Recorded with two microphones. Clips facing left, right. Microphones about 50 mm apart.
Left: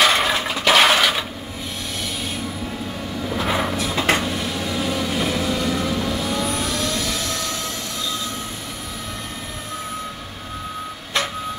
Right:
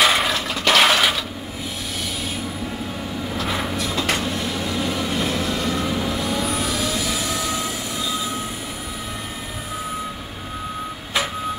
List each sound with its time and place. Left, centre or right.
0.0 s toilet flush: centre
0.3 s toilet flush: centre
0.6 s a sound: centre
3.3 s vehicle: centre
3.9 s cupboard open or close: left
4.2 s train: centre